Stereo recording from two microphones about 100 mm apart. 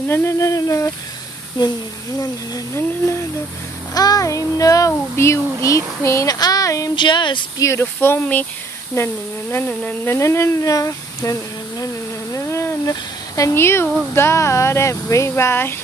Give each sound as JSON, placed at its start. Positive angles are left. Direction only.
{"t": 0.1, "sound": "speech", "side_deg": 25}
{"t": 1.6, "sound": "speech", "side_deg": 45}
{"t": 2.1, "sound": "speech", "side_deg": 35}
{"t": 3.9, "sound": "child singing", "side_deg": 40}
{"t": 7.0, "sound": "speech", "side_deg": 50}
{"t": 7.5, "sound": "speech", "side_deg": 30}
{"t": 10.1, "sound": "child singing", "side_deg": 30}
{"t": 12.4, "sound": "a sound", "side_deg": 25}
{"t": 13.4, "sound": "speech", "side_deg": 25}